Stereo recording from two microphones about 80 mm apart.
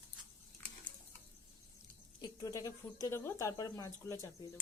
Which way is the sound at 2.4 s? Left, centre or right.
Left.